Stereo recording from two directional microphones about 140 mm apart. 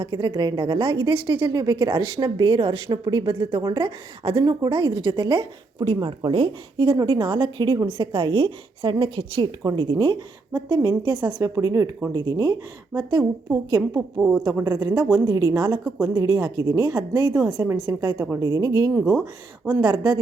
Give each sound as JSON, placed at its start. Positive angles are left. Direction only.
{"t": 0.0, "sound": "a woman's voice", "side_deg": -35}
{"t": 14.2, "sound": "a woman's voice", "side_deg": -5}
{"t": 14.6, "sound": "a woman's voice", "side_deg": -25}